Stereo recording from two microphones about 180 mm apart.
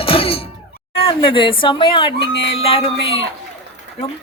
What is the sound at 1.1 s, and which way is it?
A woman's voice, 30° left (ahead or behind).